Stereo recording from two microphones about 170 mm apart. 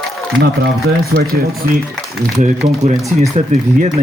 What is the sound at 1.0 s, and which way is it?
Speech, 65° right (ahead or behind).